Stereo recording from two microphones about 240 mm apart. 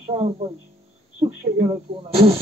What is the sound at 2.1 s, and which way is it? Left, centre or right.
Speech, right.